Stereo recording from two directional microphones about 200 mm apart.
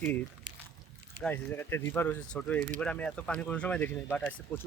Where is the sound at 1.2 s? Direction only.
10° left (ahead or behind).